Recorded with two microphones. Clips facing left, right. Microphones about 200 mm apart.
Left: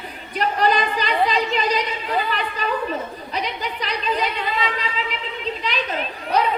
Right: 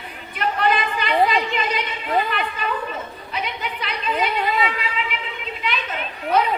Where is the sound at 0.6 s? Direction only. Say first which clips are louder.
Left 1 dB; 35° left (ahead or behind).